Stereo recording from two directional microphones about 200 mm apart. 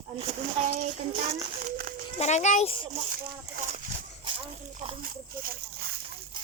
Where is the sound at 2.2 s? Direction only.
35° left (ahead or behind).